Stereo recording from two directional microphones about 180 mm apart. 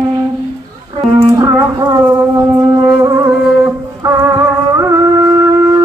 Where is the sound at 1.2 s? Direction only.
20° right (ahead or behind).